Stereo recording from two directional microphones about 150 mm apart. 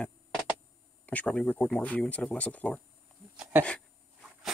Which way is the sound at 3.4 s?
15° right (ahead or behind).